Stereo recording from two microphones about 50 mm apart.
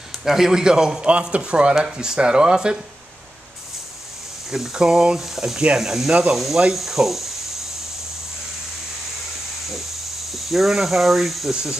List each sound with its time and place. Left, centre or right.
0.2 s a man's voice: centre
4.5 s speech: centre
10.3 s speech: centre